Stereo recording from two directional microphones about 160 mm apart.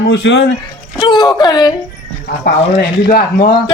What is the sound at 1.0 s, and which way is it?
Speech, 30° left (ahead or behind).